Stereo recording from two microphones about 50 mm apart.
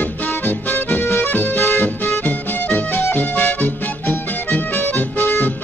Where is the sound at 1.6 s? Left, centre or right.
Left.